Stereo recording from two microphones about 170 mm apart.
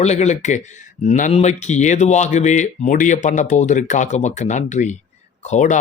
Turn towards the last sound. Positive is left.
turn(degrees=45)  # may be behind; listen again after turning